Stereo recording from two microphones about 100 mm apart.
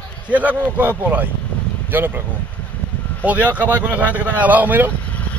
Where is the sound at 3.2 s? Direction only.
15° right (ahead or behind).